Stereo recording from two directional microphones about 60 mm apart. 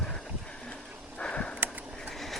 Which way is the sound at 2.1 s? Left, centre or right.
Centre.